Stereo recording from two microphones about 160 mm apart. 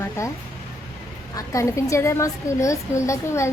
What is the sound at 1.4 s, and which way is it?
A woman's voice, 20° left (ahead or behind).